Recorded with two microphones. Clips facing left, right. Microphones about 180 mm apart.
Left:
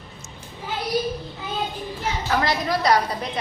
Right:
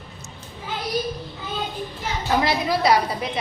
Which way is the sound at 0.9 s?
10° left (ahead or behind).